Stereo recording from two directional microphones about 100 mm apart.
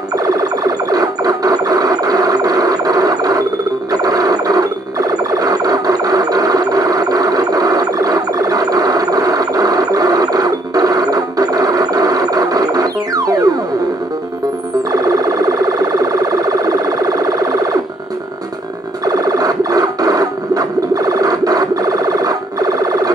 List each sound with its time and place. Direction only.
0.2 s music: 40° right (ahead or behind)
14.9 s siren: 40° right (ahead or behind)
19.0 s cacophony: 40° right (ahead or behind)